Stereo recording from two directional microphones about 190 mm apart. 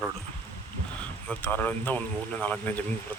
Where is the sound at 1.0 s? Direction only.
10° left (ahead or behind).